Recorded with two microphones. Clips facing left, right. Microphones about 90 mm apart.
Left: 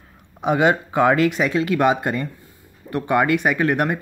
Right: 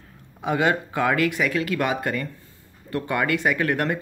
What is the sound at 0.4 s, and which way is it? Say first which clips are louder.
Speech: left 4 dB; 20° left (ahead or behind).